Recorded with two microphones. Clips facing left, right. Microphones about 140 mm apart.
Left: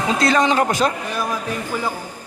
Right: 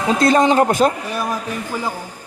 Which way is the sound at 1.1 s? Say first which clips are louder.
Right 1 dB; 5° right (ahead or behind).